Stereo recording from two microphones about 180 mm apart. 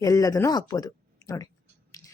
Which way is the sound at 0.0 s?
20° left (ahead or behind).